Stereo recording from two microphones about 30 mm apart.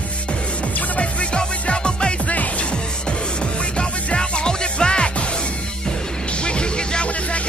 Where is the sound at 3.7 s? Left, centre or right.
Left.